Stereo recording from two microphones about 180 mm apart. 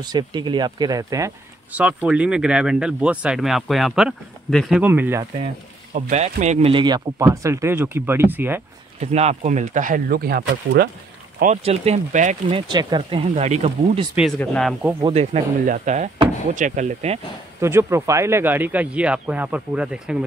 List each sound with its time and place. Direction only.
0.0 s speech: 25° right (ahead or behind); by 4.8 s centre (ahead or behind)
4.8 s speech: 10° right (ahead or behind)
5.9 s speech: 40° right (ahead or behind)
6.7 s speech: 25° right (ahead or behind)
9.0 s speech: 35° right (ahead or behind); by 10.9 s 75° right (ahead or behind)
11.4 s speech: 35° right (ahead or behind)
12.4 s speech: 25° right (ahead or behind)
14.4 s speech: 5° left (ahead or behind)
15.0 s speech: 25° right (ahead or behind)
15.3 s speech: 45° right (ahead or behind)
17.6 s speech: 15° right (ahead or behind)